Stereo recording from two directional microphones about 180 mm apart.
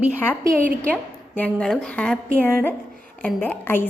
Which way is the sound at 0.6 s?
5° left (ahead or behind).